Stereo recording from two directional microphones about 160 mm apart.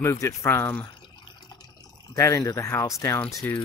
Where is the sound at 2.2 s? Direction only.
20° left (ahead or behind).